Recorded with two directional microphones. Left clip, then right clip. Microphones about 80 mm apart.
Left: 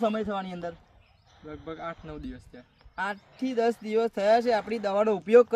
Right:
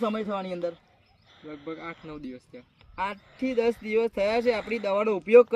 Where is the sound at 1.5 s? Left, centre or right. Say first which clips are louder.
Even; left.